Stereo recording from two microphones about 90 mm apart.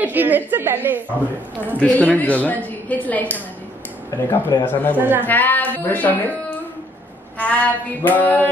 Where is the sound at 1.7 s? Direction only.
15° left (ahead or behind).